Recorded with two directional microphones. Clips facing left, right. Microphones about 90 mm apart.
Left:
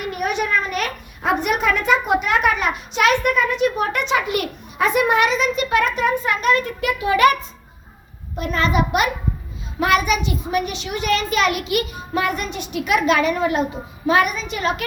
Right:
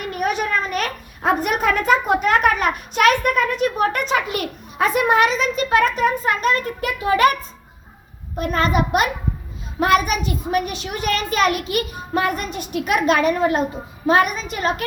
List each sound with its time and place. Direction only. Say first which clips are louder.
0.1 s a child's voice: even; 40° right (ahead or behind)
8.4 s a child's voice: right 1 dB; 45° right (ahead or behind)